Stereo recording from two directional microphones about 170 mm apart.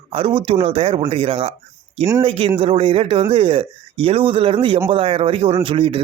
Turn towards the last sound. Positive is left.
turn(degrees=-30)  # may be behind; listen again after turning